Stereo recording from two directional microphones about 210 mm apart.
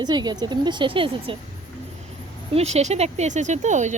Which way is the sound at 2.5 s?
30° right (ahead or behind).